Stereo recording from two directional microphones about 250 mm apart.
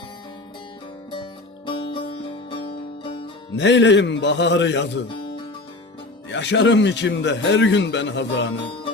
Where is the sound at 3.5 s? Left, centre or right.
Left.